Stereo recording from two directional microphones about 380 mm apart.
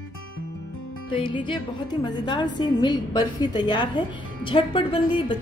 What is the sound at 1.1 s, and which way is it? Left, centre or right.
Speech, centre.